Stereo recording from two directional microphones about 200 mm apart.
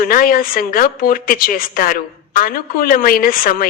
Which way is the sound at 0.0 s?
45° left (ahead or behind).